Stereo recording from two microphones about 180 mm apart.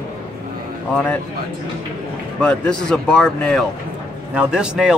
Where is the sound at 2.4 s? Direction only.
5° left (ahead or behind).